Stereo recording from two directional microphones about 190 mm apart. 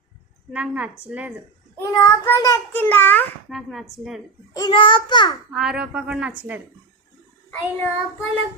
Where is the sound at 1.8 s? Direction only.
15° left (ahead or behind); by 4.2 s centre (ahead or behind).